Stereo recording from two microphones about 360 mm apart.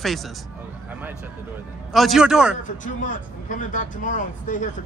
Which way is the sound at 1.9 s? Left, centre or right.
Centre.